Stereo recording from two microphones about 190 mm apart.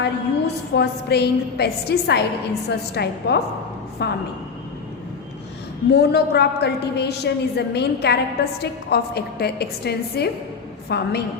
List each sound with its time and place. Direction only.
0.0 s a woman's voice: 60° left (ahead or behind)
5.9 s a woman's voice: 60° left (ahead or behind)